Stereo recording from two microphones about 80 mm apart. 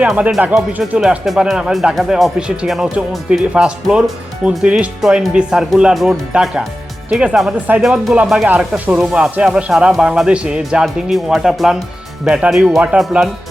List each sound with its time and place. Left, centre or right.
0.0 s speech: centre
0.4 s speech: centre
4.9 s speech: centre